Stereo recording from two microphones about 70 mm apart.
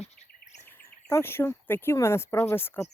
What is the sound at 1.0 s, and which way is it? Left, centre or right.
Speech, left.